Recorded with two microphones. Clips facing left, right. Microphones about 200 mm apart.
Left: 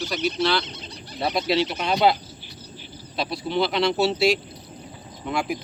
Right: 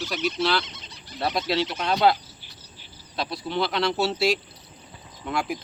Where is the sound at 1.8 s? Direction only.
10° left (ahead or behind).